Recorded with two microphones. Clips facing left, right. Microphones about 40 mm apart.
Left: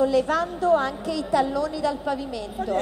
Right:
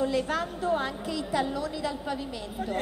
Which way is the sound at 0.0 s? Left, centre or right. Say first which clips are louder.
Left 6 dB; centre.